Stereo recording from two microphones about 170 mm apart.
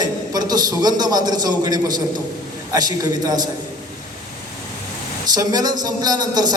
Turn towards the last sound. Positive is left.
turn(degrees=-25)  # may be behind; listen again after turning